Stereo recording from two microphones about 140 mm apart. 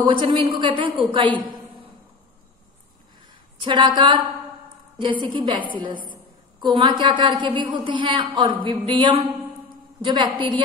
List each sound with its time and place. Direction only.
0.0 s a woman's voice: 35° right (ahead or behind)
3.6 s a woman's voice: 35° right (ahead or behind)
5.2 s a woman's voice: 35° right (ahead or behind)